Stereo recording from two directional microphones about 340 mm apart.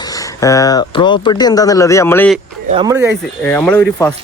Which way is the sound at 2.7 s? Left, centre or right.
Centre.